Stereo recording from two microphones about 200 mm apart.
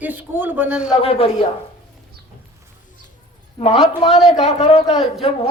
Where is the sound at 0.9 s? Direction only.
30° left (ahead or behind).